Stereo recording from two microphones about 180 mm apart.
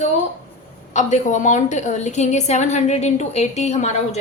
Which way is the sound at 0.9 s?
40° left (ahead or behind).